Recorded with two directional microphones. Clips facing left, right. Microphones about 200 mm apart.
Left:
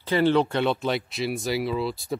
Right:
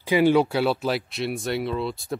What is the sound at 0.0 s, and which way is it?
Speech, 10° right (ahead or behind).